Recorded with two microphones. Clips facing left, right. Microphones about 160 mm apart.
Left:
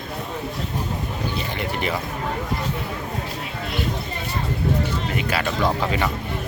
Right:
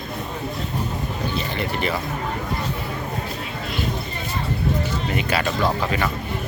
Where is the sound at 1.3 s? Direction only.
15° left (ahead or behind).